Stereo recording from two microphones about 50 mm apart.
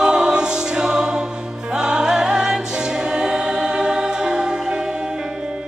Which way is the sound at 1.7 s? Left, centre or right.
Centre.